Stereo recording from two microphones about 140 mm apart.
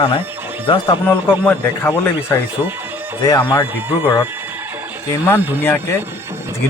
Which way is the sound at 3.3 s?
25° left (ahead or behind).